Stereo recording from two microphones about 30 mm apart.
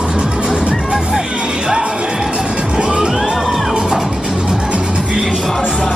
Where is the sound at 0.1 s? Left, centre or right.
Right.